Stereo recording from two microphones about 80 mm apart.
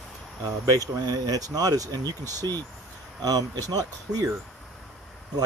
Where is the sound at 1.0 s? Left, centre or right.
Right.